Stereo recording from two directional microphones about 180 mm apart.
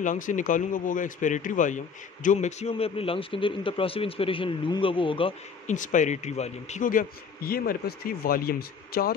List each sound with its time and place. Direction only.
0.0 s a man's voice: 45° left (ahead or behind); by 5.3 s 30° left (ahead or behind)
5.7 s a man's voice: 45° left (ahead or behind)